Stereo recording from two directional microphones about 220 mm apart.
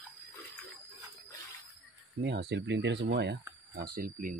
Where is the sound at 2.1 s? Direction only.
50° right (ahead or behind).